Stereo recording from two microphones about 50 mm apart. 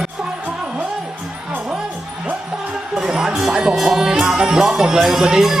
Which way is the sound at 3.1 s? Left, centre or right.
Centre.